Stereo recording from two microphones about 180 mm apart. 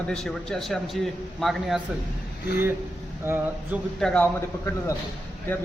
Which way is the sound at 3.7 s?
5° left (ahead or behind).